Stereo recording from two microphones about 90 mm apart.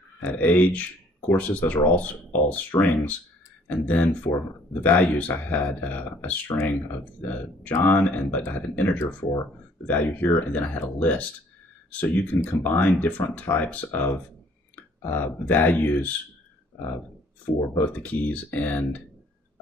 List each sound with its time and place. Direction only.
0.2 s speech: 20° left (ahead or behind)
8.4 s speech: 30° left (ahead or behind)
17.6 s speech: 20° left (ahead or behind)